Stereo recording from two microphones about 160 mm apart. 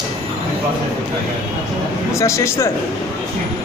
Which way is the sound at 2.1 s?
20° left (ahead or behind).